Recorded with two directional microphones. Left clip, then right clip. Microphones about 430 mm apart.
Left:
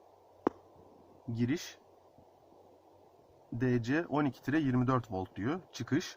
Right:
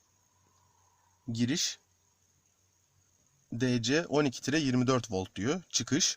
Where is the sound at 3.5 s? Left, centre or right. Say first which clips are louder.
Right 3 dB; right.